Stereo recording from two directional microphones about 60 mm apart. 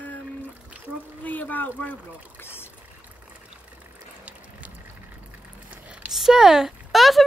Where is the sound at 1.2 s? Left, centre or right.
Left.